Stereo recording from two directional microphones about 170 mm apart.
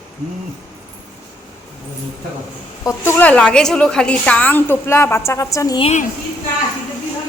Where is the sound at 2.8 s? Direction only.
15° left (ahead or behind).